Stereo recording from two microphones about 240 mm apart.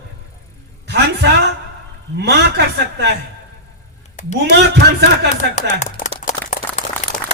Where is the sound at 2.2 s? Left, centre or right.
Right.